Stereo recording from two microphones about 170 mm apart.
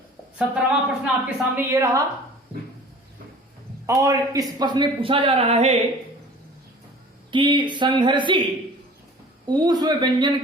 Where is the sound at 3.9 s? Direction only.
20° right (ahead or behind); by 5.8 s 35° right (ahead or behind).